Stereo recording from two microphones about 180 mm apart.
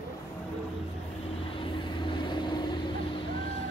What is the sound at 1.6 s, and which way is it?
Vehicle, 25° left (ahead or behind).